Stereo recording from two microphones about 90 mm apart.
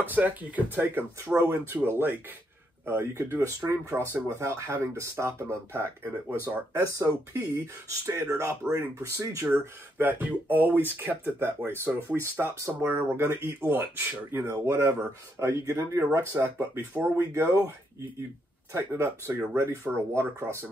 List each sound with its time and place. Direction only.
0.0 s speech: 20° right (ahead or behind)
1.3 s speech: 35° right (ahead or behind)
6.8 s speech: 40° right (ahead or behind)
9.6 s speech: 25° right (ahead or behind)
18.7 s speech: 25° right (ahead or behind)